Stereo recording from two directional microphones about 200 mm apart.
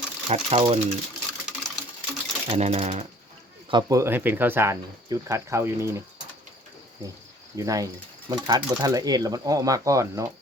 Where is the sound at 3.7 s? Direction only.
20° right (ahead or behind).